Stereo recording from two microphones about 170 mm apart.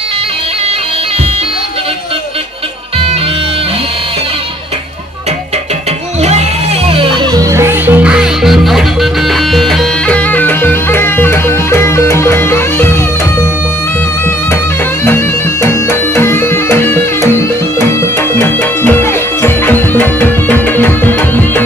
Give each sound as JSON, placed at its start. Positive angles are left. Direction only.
{"t": 6.9, "sound": "music", "side_deg": -30}
{"t": 7.5, "sound": "music", "side_deg": -15}
{"t": 15.0, "sound": "music", "side_deg": 15}